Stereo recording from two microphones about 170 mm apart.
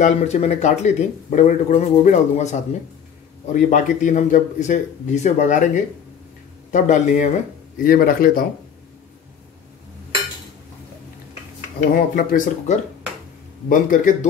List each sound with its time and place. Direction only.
0.0 s speech: 40° left (ahead or behind)
7.8 s a man's voice: 60° left (ahead or behind)
12.2 s a man's voice: 55° left (ahead or behind)